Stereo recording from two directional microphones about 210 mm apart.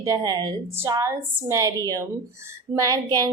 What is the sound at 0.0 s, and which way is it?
A woman's voice, 15° right (ahead or behind).